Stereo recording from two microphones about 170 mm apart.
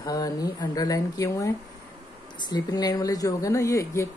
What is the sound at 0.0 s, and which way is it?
Speech, 20° left (ahead or behind).